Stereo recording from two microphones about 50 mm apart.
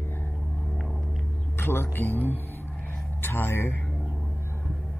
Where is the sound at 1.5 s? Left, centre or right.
Left.